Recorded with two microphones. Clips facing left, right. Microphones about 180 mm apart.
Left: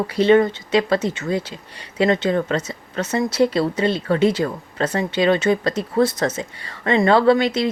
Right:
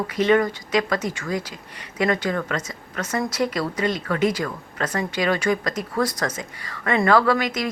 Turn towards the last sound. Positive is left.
turn(degrees=30)  # may be behind; listen again after turning